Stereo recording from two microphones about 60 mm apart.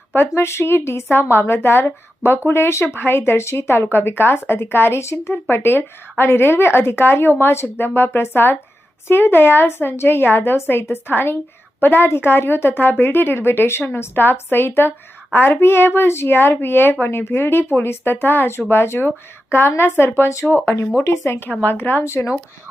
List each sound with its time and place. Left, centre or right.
0.1 s a woman's voice: left